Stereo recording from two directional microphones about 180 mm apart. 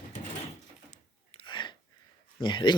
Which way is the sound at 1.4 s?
25° left (ahead or behind).